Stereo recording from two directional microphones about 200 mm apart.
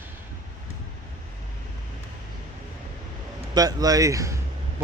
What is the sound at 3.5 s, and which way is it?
Speech, 20° right (ahead or behind).